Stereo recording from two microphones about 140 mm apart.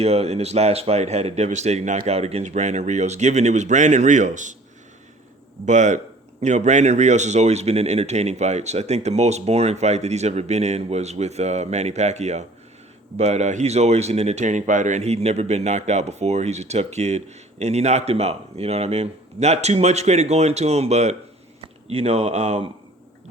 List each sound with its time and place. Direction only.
0.0 s speech: 50° right (ahead or behind)
5.6 s speech: 60° right (ahead or behind)